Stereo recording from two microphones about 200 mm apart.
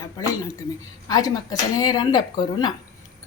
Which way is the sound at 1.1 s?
20° left (ahead or behind).